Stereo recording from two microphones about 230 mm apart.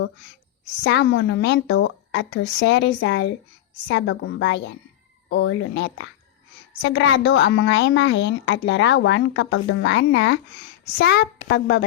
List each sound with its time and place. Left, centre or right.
0.9 s a woman's voice: left